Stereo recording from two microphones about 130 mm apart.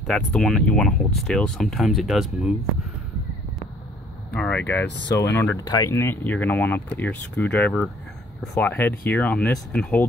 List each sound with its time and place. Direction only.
0.0 s speech: 5° left (ahead or behind)
4.3 s speech: 10° left (ahead or behind)
5.6 s speech: 30° left (ahead or behind); by 10.0 s 10° left (ahead or behind)